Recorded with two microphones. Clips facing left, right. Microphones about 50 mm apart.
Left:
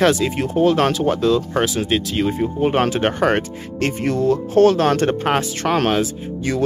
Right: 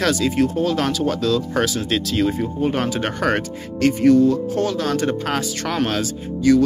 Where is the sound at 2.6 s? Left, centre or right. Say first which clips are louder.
Left 5 dB; left.